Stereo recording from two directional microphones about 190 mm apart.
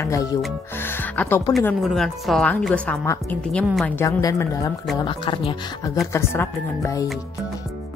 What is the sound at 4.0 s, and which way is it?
A woman's voice, 15° left (ahead or behind).